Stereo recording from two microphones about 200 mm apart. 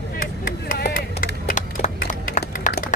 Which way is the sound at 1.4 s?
40° left (ahead or behind).